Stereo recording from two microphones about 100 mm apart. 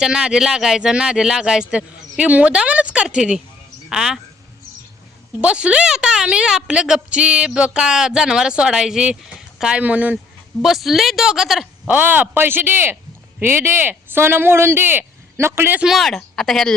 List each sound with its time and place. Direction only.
0.0 s a woman's voice: 5° right (ahead or behind)
5.4 s a woman's voice: 10° right (ahead or behind)
10.6 s a woman's voice: centre (ahead or behind)
11.9 s speech: 15° right (ahead or behind)
15.8 s a woman's voice: centre (ahead or behind)